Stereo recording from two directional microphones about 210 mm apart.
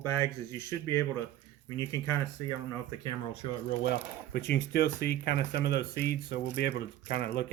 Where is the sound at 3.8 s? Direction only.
55° left (ahead or behind).